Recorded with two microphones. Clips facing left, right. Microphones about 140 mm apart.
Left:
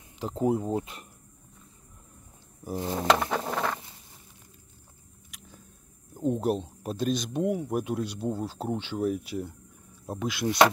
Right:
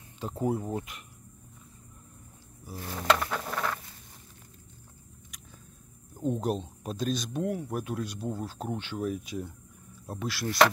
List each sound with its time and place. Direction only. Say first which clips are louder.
0.2 s speech: left 4 dB; 20° left (ahead or behind)
2.7 s speech: left 8 dB; 25° left (ahead or behind)
3.2 s patter: left 4 dB; 25° left (ahead or behind)
6.1 s speech: left 3 dB; 10° left (ahead or behind)